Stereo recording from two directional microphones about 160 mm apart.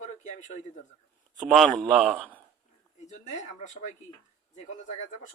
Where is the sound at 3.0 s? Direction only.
45° left (ahead or behind).